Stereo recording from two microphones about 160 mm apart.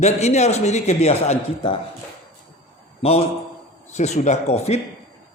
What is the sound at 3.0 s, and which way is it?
A man's voice, 40° left (ahead or behind).